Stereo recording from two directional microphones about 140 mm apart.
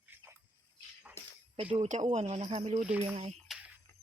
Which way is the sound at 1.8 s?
55° right (ahead or behind).